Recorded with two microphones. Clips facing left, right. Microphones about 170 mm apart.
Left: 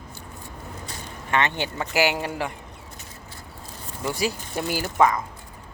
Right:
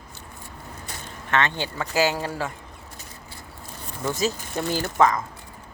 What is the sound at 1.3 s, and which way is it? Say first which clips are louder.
Speech: even; 15° left (ahead or behind).